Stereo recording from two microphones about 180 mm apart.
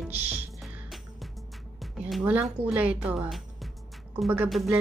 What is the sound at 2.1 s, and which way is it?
Speech, 5° right (ahead or behind).